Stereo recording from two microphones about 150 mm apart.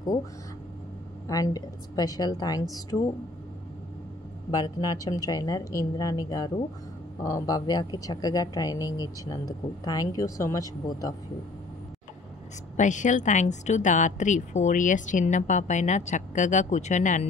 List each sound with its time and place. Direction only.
1.2 s speech: 25° left (ahead or behind)
4.5 s speech: 25° left (ahead or behind)
12.7 s speech: 55° left (ahead or behind)